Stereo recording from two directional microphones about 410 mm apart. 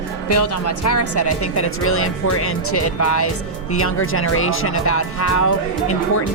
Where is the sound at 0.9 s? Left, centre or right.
Left.